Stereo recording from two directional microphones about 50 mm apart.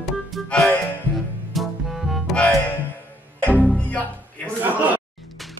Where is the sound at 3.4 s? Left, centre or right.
Left.